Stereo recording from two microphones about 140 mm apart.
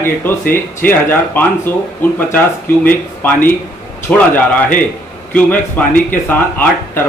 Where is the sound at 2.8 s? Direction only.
10° left (ahead or behind).